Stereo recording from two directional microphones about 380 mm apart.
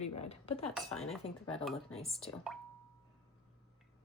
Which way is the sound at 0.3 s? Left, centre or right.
Centre.